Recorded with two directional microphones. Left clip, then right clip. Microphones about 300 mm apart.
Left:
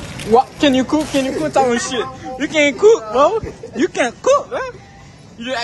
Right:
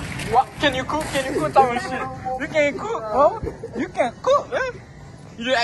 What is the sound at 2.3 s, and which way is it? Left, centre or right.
Speech, left.